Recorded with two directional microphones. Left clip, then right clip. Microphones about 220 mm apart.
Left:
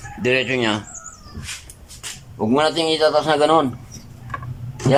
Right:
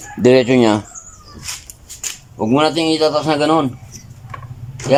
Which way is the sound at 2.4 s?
15° right (ahead or behind).